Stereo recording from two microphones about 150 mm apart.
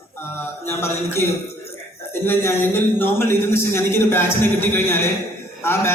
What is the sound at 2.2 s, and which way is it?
Speech, 15° left (ahead or behind).